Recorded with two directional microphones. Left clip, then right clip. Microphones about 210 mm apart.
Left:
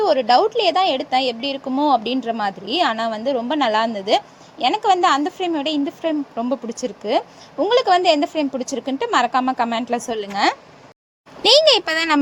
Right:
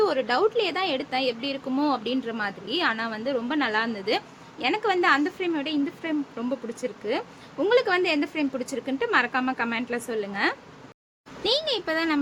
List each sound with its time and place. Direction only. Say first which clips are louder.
0.0 s speech: left 7 dB; 20° left (ahead or behind)
11.4 s speech: left 12 dB; 40° left (ahead or behind)